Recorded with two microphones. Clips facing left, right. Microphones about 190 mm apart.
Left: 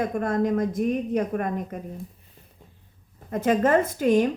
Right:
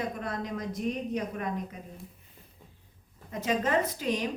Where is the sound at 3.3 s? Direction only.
50° left (ahead or behind).